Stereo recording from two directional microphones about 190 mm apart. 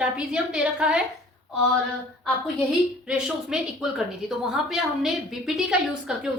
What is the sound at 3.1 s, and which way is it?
A woman's voice, 5° right (ahead or behind).